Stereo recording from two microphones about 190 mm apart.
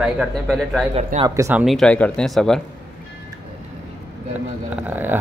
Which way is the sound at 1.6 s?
5° left (ahead or behind).